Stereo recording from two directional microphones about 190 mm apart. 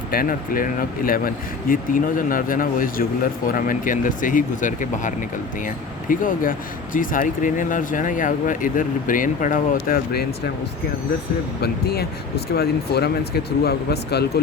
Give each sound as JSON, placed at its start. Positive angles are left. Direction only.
{"t": 0.1, "sound": "speech", "side_deg": 50}
{"t": 11.6, "sound": "speech", "side_deg": 55}